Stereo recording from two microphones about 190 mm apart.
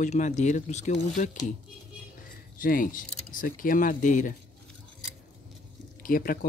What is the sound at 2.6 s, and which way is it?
Speech, 45° left (ahead or behind).